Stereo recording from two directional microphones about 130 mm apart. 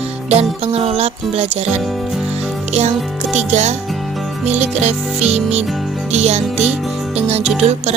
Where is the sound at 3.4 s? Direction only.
60° right (ahead or behind).